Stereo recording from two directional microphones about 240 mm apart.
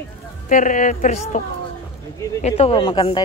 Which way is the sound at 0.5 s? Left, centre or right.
Left.